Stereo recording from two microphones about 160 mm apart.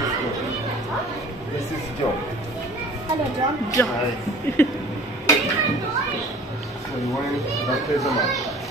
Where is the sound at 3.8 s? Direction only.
15° left (ahead or behind).